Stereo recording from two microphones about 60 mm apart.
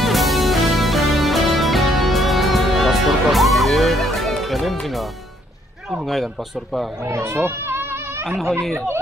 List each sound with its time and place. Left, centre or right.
0.0 s music: centre
5.9 s speech: centre
7.0 s a sound: right
8.4 s speech: centre
8.7 s speech: right